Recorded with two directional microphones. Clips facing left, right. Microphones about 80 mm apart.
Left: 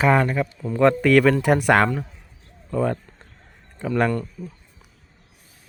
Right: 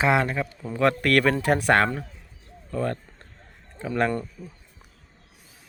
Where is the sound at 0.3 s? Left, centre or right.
Centre.